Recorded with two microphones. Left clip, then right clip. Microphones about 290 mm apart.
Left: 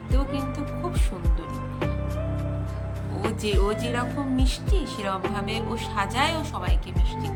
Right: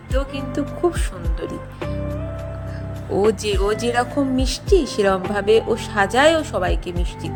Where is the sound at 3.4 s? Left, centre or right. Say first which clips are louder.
Right 6 dB; centre.